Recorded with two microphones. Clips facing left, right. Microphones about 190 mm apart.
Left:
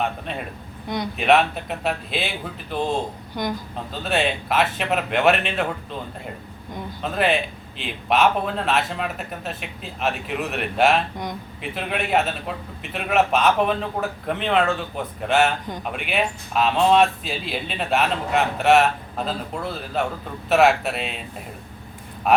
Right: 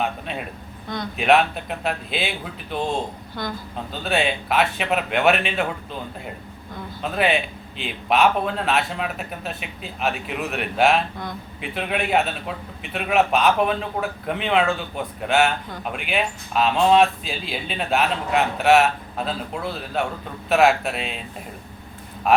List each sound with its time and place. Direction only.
0.0 s a man's voice: centre (ahead or behind)
3.3 s speech: 15° left (ahead or behind)
4.0 s speech: centre (ahead or behind)